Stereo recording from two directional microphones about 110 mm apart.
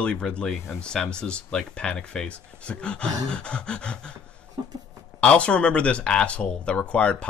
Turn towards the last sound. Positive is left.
turn(degrees=10)  # may be behind; listen again after turning